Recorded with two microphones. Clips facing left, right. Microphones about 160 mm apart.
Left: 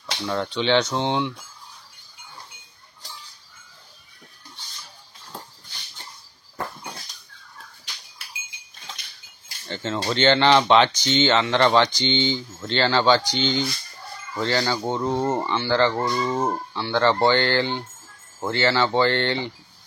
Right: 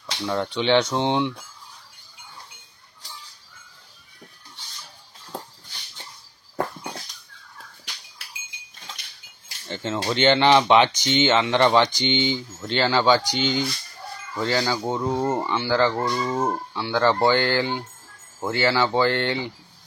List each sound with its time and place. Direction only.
0.0 s speech: 15° right (ahead or behind)
10.0 s speech: 10° right (ahead or behind)